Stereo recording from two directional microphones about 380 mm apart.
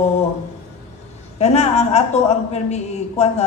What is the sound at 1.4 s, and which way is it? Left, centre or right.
A man's voice, centre.